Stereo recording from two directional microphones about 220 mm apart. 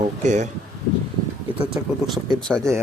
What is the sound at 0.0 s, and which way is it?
Speech, 30° right (ahead or behind).